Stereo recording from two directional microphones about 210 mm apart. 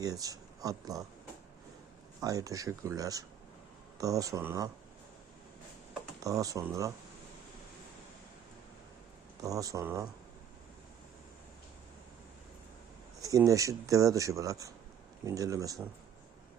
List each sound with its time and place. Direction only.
0.0 s speech: 15° right (ahead or behind)
2.2 s speech: 15° right (ahead or behind)
6.2 s speech: 15° right (ahead or behind)
9.4 s speech: 15° right (ahead or behind)
13.2 s speech: 15° right (ahead or behind)